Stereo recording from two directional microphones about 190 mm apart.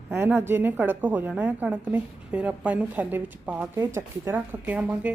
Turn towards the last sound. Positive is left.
turn(degrees=-5)  # may be behind; listen again after turning